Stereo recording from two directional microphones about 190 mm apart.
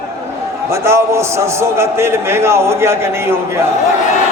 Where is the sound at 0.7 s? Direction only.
15° right (ahead or behind).